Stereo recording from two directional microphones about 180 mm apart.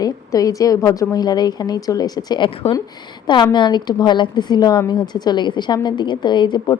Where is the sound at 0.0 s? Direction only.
20° left (ahead or behind).